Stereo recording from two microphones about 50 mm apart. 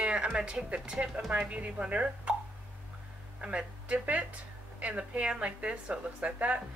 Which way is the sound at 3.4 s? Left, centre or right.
Right.